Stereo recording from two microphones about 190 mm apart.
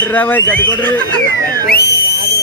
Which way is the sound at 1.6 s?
55° left (ahead or behind).